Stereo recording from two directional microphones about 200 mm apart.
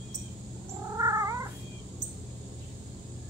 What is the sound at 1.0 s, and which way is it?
Cat, 15° right (ahead or behind).